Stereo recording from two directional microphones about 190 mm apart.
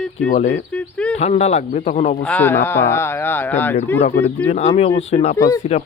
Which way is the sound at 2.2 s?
10° left (ahead or behind).